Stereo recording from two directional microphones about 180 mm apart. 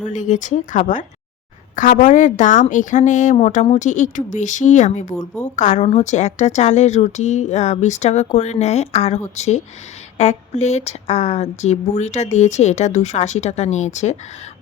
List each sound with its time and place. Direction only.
0.0 s a woman's voice: 45° left (ahead or behind)